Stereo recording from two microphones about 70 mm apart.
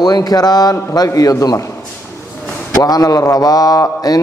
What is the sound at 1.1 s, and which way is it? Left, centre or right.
Speech, left.